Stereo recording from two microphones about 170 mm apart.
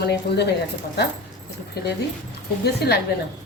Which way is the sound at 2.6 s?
70° left (ahead or behind).